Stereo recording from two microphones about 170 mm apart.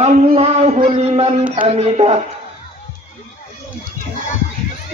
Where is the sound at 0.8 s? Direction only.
35° right (ahead or behind).